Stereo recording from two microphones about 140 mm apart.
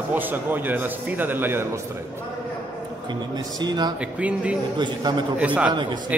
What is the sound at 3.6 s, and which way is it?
Speech, 30° right (ahead or behind).